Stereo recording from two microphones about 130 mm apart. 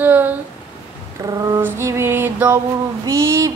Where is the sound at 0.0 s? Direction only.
15° right (ahead or behind).